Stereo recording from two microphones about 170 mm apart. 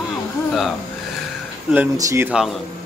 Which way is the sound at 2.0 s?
20° right (ahead or behind).